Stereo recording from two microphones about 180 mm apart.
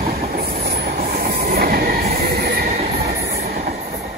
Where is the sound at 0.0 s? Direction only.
55° right (ahead or behind).